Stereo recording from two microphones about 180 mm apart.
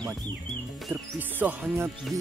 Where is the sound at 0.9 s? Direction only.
10° right (ahead or behind).